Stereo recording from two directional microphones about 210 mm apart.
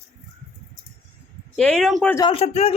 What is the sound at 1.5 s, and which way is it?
Speech, 5° left (ahead or behind).